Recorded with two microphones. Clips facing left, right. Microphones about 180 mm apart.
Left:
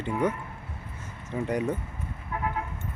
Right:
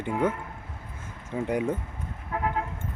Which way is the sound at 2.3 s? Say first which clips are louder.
Right 3 dB; 70° right (ahead or behind).